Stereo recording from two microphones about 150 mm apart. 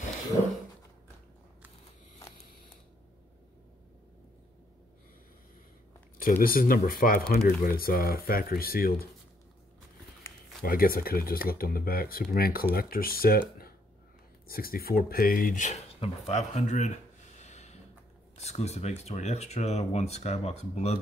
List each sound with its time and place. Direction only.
6.4 s speech: 70° left (ahead or behind)
10.6 s speech: 75° left (ahead or behind)
14.5 s speech: 80° left; by 16.9 s 50° left (ahead or behind)
17.4 s a sound: 50° left (ahead or behind)
18.4 s speech: 45° left (ahead or behind)